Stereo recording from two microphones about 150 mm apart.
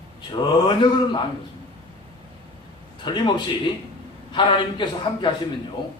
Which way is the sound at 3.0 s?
30° left (ahead or behind).